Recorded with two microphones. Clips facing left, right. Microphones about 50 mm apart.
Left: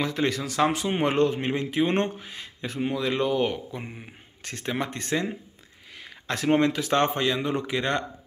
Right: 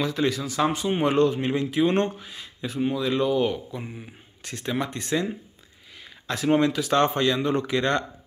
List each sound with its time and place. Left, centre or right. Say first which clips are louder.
0.0 s speech: right 1 dB; left
1.0 s speech: right 2 dB; left
5.9 s a sound: even; left
6.5 s speech: right 1 dB; left; by 8.0 s centre